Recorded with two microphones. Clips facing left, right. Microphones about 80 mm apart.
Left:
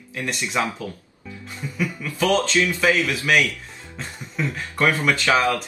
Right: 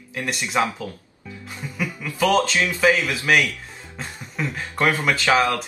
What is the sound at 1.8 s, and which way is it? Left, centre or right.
A man's voice, right.